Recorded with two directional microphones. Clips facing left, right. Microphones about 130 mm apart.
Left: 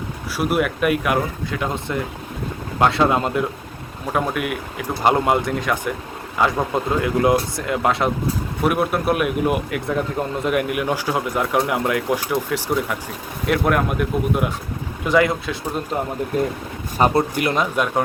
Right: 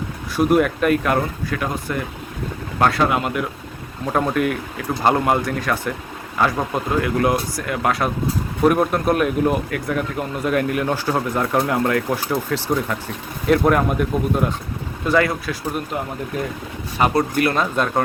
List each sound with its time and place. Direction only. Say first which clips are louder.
0.3 s a man's voice: right 4 dB; 5° left (ahead or behind); by 3.4 s 25° left (ahead or behind)
4.1 s a man's voice: right 3 dB; 5° left (ahead or behind)
5.0 s a man's voice: even; 20° left (ahead or behind)
8.6 s a man's voice: right 3 dB; 10° left (ahead or behind)
15.0 s speech: left 1 dB; 15° left (ahead or behind)
17.0 s speech: left 1 dB; 35° left (ahead or behind)
17.3 s a man's voice: right 1 dB; 15° left (ahead or behind)